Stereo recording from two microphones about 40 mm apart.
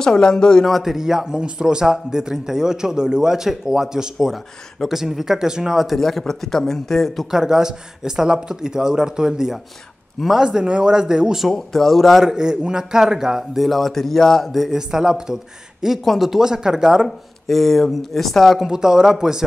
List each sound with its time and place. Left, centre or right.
0.0 s a man's voice: centre
0.7 s speech: centre
0.9 s a man's voice: centre
5.9 s a man's voice: centre
7.2 s a man's voice: centre
11.4 s speech: centre
12.2 s a man's voice: centre
13.6 s speech: centre
14.5 s a man's voice: centre
16.0 s a man's voice: centre
17.5 s speech: centre
18.6 s a man's voice: centre